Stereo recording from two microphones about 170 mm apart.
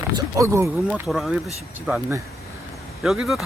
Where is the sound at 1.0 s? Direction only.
Centre (ahead or behind).